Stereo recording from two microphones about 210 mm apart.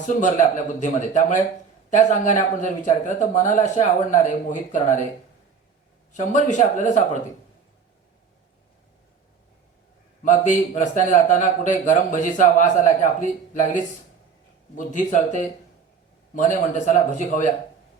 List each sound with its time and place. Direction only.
0.0 s a man's voice: 35° left (ahead or behind)
6.1 s a man's voice: 35° left (ahead or behind)
10.2 s a man's voice: 35° left (ahead or behind)